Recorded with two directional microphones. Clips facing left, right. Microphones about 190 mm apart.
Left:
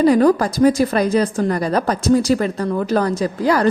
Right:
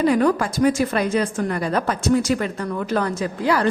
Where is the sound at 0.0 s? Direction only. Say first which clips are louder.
Left 5 dB; 35° left (ahead or behind).